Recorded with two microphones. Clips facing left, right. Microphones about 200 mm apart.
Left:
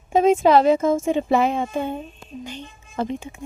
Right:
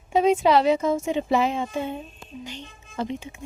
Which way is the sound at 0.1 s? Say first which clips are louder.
Left 3 dB; 50° left (ahead or behind).